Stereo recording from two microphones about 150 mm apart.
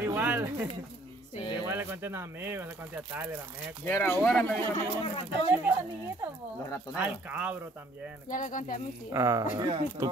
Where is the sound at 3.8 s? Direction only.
15° left (ahead or behind).